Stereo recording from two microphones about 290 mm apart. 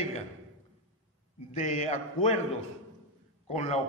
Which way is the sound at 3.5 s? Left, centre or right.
Left.